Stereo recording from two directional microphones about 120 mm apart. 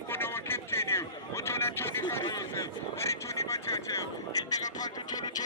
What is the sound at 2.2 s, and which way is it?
Vehicle, 30° left (ahead or behind).